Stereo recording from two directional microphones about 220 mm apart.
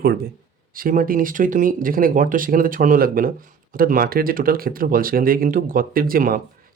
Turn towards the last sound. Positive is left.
turn(degrees=-40)  # may be behind; listen again after turning